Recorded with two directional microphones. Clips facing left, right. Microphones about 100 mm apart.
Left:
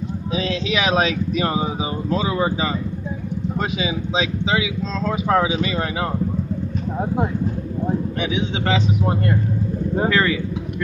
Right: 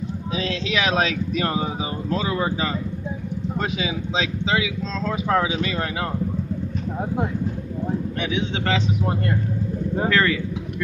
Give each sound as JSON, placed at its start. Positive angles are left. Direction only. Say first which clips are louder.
{"t": 0.3, "sound": "speech", "louder": "left 3 dB", "side_deg": 15}
{"t": 8.2, "sound": "speech", "louder": "left 2 dB", "side_deg": 15}
{"t": 10.0, "sound": "speech", "louder": "left 1 dB", "side_deg": 15}